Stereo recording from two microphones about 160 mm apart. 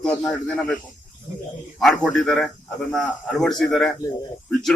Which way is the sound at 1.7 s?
Centre (ahead or behind).